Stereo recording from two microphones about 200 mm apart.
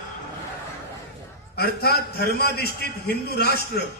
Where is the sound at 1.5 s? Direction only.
50° left (ahead or behind).